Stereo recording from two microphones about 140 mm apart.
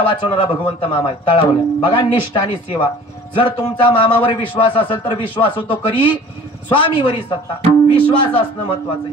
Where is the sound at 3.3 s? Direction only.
35° left (ahead or behind).